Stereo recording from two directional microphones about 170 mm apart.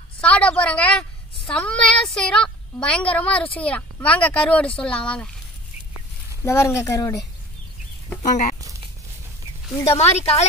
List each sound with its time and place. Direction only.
0.2 s a woman's voice: 5° left (ahead or behind)
6.4 s speech: 15° left (ahead or behind)
8.2 s speech: 45° left (ahead or behind)
9.8 s speech: 40° left (ahead or behind)